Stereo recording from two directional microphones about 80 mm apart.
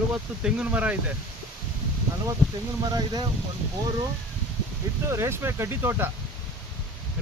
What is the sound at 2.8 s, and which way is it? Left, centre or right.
Speech, right.